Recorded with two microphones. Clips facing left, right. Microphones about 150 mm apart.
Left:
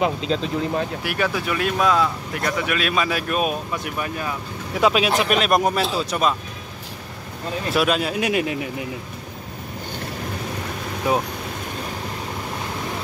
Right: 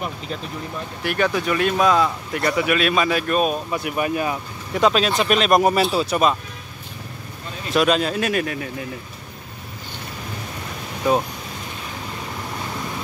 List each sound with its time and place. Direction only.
0.0 s speech: 90° left
1.0 s speech: 5° left (ahead or behind)
3.7 s speech: 10° right (ahead or behind)
4.7 s speech: 10° left (ahead or behind)
7.7 s speech: 5° left (ahead or behind)
11.1 s speech: 10° left (ahead or behind)